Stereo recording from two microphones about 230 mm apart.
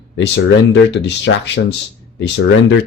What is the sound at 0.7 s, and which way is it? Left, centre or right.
Speech, left.